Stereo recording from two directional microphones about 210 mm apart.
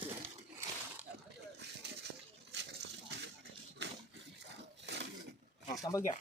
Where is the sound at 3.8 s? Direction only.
55° right (ahead or behind).